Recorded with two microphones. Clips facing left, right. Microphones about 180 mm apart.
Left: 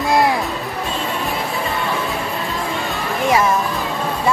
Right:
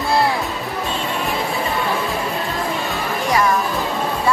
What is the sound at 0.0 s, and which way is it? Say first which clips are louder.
Music: left 2 dB; 20° left (ahead or behind).